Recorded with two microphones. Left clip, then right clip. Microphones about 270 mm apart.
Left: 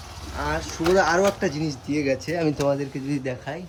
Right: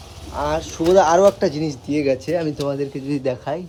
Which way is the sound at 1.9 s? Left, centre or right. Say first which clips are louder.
Right 5 dB; right.